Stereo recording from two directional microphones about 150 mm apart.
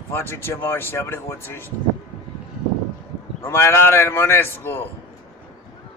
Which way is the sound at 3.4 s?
15° left (ahead or behind).